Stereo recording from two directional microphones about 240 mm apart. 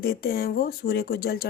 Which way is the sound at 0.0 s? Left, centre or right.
Left.